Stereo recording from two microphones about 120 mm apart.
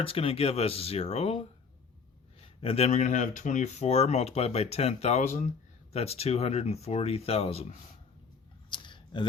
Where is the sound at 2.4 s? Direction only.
55° left (ahead or behind).